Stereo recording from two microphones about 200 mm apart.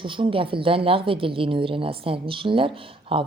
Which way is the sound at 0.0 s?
25° right (ahead or behind).